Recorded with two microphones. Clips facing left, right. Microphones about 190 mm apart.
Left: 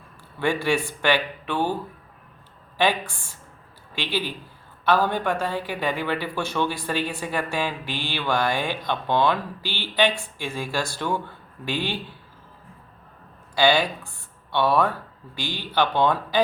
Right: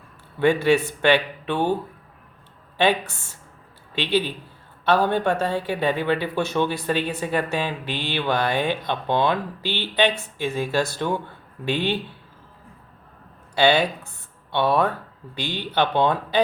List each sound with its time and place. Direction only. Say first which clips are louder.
0.3 s speech: right 5 dB; 20° right (ahead or behind)
2.7 s speech: right 2 dB; 25° right (ahead or behind)
13.6 s speech: right 2 dB; 20° right (ahead or behind)